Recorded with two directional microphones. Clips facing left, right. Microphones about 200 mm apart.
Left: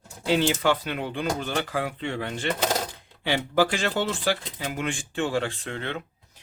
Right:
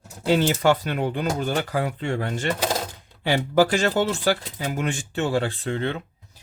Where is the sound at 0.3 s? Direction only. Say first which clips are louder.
Right 3 dB; 45° right (ahead or behind).